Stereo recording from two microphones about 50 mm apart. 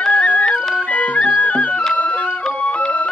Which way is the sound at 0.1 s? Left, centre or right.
Left.